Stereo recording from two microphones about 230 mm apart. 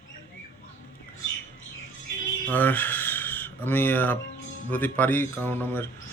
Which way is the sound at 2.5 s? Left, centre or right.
Centre.